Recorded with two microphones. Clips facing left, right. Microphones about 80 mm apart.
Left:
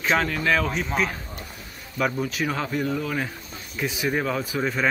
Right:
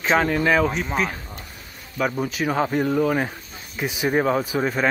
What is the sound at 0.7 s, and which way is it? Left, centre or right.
Speech, centre.